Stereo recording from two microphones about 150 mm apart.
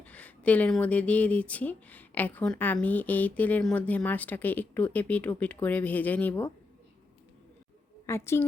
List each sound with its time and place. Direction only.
0.0 s speech: 10° left (ahead or behind)
8.0 s a woman's voice: 15° left (ahead or behind)